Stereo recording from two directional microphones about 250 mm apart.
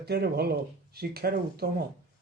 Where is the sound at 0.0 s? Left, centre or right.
Right.